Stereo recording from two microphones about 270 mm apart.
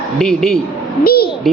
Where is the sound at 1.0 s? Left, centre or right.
Left.